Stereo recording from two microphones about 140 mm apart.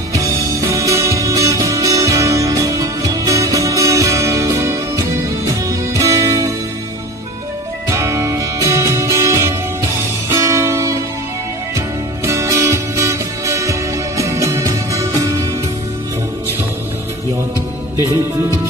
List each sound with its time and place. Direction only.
0.1 s music: 25° right (ahead or behind)
7.9 s music: 20° right (ahead or behind)
12.3 s music: 20° right (ahead or behind)